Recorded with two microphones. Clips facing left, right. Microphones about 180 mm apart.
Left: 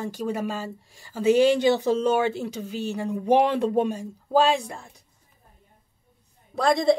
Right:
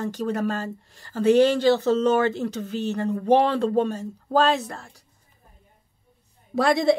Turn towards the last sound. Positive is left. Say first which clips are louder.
# right 1 dB
turn(degrees=0)  # may be behind; listen again after turning